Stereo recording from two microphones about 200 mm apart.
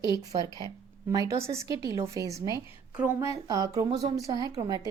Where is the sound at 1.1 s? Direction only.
15° right (ahead or behind).